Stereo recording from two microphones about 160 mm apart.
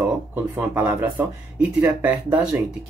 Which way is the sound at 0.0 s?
15° right (ahead or behind).